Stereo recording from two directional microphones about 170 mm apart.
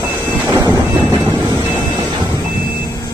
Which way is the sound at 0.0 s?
20° right (ahead or behind).